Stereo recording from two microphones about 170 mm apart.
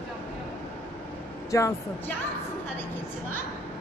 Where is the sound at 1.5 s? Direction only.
20° left (ahead or behind).